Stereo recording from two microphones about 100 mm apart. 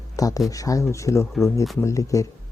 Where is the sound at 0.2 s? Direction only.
35° left (ahead or behind).